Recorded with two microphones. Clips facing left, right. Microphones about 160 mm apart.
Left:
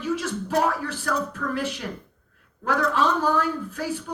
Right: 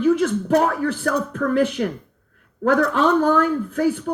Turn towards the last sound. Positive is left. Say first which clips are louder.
# right 8 dB
turn(degrees=-55)  # may be behind; listen again after turning